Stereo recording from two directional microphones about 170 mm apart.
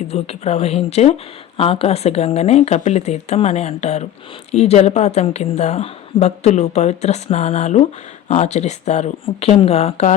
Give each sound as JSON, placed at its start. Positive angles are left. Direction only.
{"t": 0.1, "sound": "speech", "side_deg": 35}